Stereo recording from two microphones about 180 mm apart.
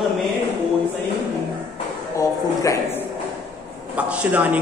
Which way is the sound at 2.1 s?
15° left (ahead or behind).